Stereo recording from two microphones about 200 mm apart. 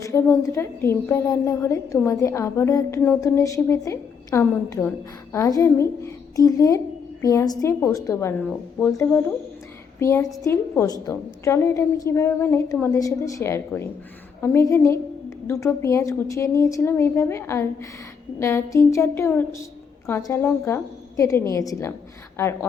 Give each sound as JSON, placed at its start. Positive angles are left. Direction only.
{"t": 0.0, "sound": "a woman's voice", "side_deg": 15}